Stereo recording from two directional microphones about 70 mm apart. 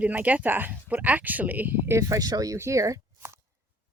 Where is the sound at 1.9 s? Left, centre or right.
Right.